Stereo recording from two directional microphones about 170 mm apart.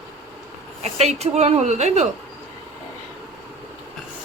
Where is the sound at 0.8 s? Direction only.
40° right (ahead or behind).